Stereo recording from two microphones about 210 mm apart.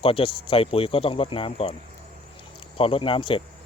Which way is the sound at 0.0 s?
25° left (ahead or behind).